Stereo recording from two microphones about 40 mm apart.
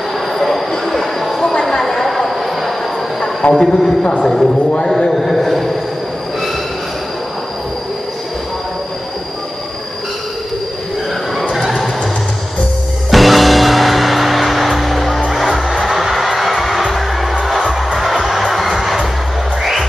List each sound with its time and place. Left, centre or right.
0.3 s train: centre
1.5 s a sound: centre
1.8 s a sound: centre
3.5 s a man's voice: centre
11.3 s train: centre
13.1 s music: centre